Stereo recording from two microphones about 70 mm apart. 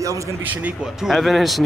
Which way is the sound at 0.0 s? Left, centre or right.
Right.